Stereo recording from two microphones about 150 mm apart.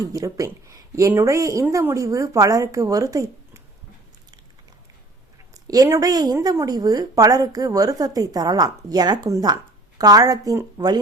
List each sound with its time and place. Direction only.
0.0 s a woman's voice: 20° right (ahead or behind)
5.6 s a woman's voice: 25° right (ahead or behind)